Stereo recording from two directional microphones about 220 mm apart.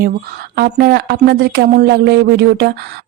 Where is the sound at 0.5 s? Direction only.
45° right (ahead or behind).